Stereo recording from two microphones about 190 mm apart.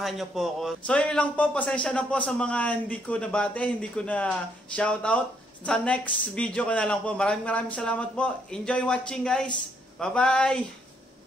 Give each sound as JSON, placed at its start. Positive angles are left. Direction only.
{"t": 0.0, "sound": "a man's voice", "side_deg": 0}